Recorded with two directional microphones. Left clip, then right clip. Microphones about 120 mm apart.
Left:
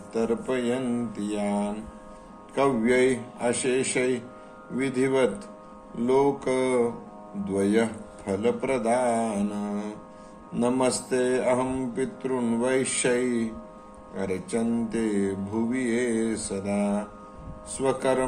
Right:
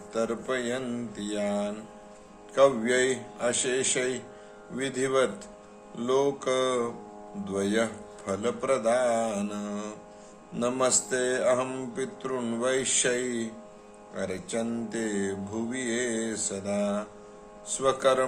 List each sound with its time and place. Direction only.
0.1 s mantra: 35° right (ahead or behind)